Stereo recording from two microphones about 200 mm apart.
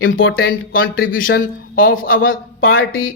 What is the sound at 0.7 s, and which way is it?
Speech, 85° left.